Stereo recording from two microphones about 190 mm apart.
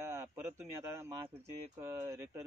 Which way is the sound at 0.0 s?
15° right (ahead or behind).